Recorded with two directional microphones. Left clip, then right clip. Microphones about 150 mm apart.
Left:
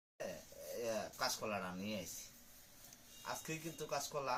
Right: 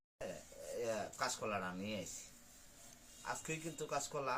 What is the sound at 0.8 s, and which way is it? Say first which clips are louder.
Speech: even; 5° right (ahead or behind).